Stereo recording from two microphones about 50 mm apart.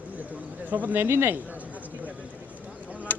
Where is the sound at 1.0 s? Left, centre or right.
Right.